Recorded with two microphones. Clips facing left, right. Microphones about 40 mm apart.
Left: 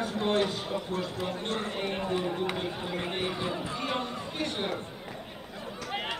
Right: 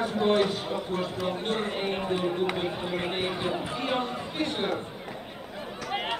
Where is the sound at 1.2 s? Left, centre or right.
Right.